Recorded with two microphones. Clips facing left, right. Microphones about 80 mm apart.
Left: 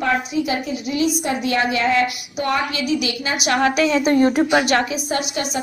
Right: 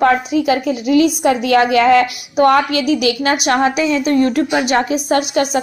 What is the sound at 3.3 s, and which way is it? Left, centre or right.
Speech, right.